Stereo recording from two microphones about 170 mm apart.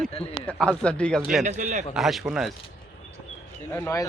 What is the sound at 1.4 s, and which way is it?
Speech, 45° right (ahead or behind).